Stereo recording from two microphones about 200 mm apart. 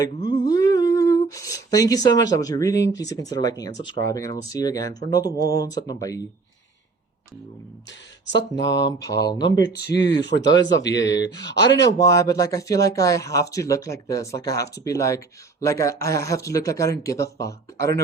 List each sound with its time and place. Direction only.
0.0 s a sound: 20° left (ahead or behind)
3.0 s speech: 20° left (ahead or behind)
8.4 s speech: 60° left (ahead or behind)
10.4 s speech: 20° left (ahead or behind)
10.8 s speech: 60° left (ahead or behind)
11.9 s speech: 15° left (ahead or behind)